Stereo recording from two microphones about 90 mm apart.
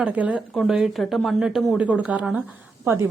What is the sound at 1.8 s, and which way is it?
Speech, 15° right (ahead or behind).